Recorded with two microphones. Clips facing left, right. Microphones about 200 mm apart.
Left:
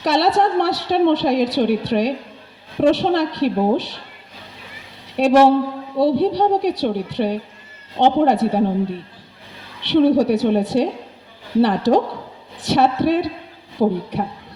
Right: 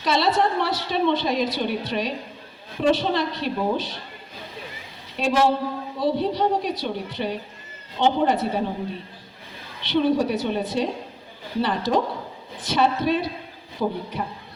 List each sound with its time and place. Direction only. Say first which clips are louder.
0.0 s a woman's voice: left 4 dB; 70° left (ahead or behind)
5.1 s a woman's voice: left 8 dB; 65° left (ahead or behind)
9.8 s a woman's voice: left 6 dB; 70° left (ahead or behind)
13.8 s speech: left 8 dB; 35° left (ahead or behind)